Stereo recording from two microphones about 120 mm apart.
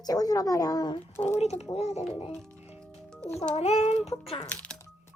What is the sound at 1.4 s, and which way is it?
Speech, 65° left (ahead or behind).